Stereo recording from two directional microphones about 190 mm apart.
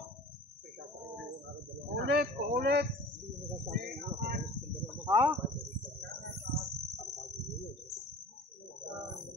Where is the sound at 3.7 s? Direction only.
55° right (ahead or behind).